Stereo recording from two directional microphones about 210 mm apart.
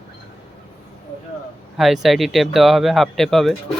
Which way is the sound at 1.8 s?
Centre (ahead or behind).